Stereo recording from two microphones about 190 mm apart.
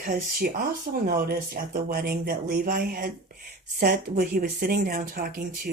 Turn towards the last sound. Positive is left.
turn(degrees=-50)  # may be behind; listen again after turning